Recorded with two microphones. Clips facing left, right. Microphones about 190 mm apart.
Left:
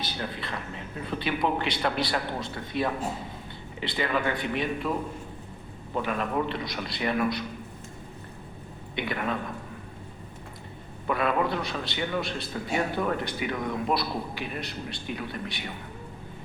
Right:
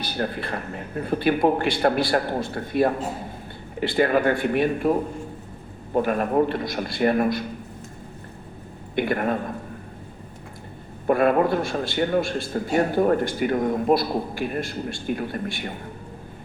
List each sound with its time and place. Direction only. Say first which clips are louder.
0.1 s a man's voice: right 7 dB; 50° right (ahead or behind)
9.0 s a man's voice: right 7 dB; 50° right (ahead or behind)
11.0 s a man's voice: right 7 dB; 50° right (ahead or behind)